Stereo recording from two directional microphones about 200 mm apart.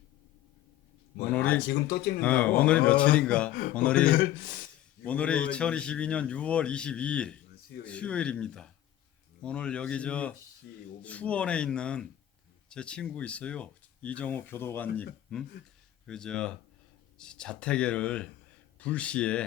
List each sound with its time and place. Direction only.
1.3 s speech: 10° left (ahead or behind)
1.6 s speech: 50° left (ahead or behind)
2.2 s a man's voice: 5° left (ahead or behind)
5.0 s a man's voice: 5° left (ahead or behind)